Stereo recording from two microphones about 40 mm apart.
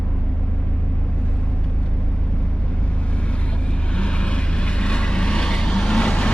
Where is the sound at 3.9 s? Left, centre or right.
Left.